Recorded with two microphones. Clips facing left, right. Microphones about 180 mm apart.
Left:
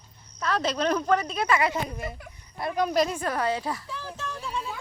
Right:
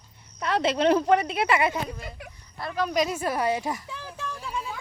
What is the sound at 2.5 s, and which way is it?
Speech, 20° left (ahead or behind).